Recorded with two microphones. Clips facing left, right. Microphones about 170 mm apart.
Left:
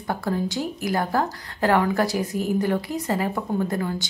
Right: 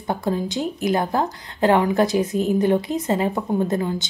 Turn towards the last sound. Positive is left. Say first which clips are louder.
# right 3 dB
turn(degrees=-20)  # may be behind; listen again after turning